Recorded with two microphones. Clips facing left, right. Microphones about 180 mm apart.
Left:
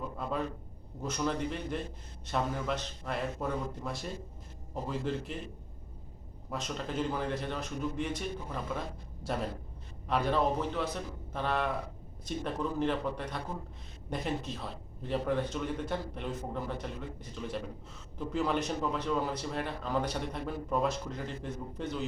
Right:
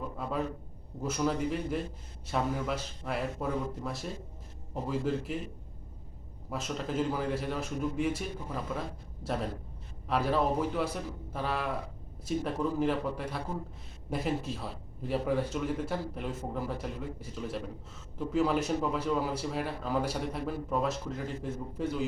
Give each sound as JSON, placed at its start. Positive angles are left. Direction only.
{"t": 0.2, "sound": "a man's voice", "side_deg": -5}
{"t": 6.5, "sound": "a man's voice", "side_deg": -5}